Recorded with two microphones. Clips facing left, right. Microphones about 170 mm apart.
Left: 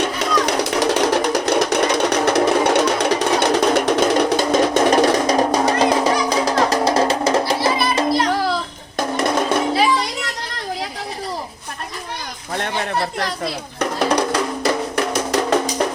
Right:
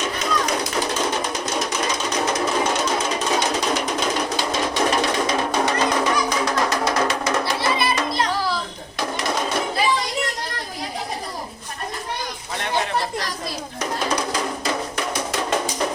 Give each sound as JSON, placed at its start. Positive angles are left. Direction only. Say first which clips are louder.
{"t": 0.0, "sound": "music", "louder": "left 5 dB", "side_deg": 70}
{"t": 4.4, "sound": "music", "louder": "left 7 dB", "side_deg": 45}
{"t": 9.0, "sound": "music", "louder": "left 5 dB", "side_deg": 50}
{"t": 13.1, "sound": "music", "louder": "left 4 dB", "side_deg": 60}